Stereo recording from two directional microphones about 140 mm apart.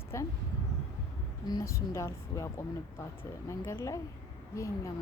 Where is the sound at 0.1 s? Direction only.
20° left (ahead or behind).